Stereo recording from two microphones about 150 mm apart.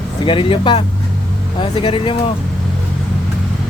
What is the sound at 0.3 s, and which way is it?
Speech, 35° left (ahead or behind).